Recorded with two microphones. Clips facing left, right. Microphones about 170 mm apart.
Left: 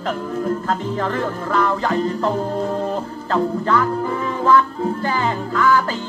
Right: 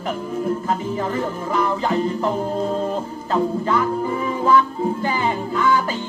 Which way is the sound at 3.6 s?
15° right (ahead or behind).